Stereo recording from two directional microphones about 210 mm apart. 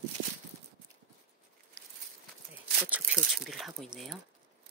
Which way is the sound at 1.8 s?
55° right (ahead or behind).